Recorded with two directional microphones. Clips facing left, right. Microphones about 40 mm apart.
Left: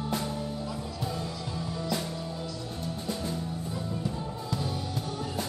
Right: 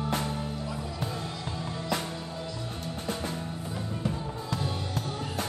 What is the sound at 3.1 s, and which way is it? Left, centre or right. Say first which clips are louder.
Music: right 1 dB; right.